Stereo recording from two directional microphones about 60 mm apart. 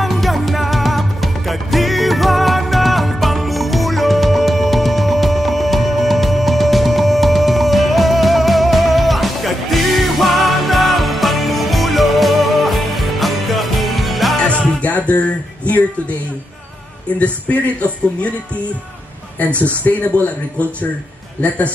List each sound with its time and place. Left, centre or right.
0.0 s music: centre
14.8 s music: left
17.2 s speech: left
19.8 s speech: left
21.4 s speech: left